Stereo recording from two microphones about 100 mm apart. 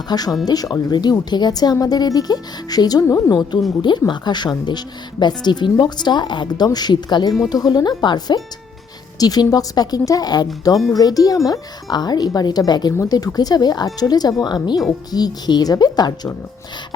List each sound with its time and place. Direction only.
0.1 s a woman's voice: 40° left (ahead or behind)
3.8 s a woman's voice: 50° left (ahead or behind)